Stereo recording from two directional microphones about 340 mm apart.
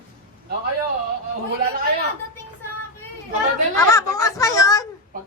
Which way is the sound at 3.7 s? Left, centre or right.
Centre.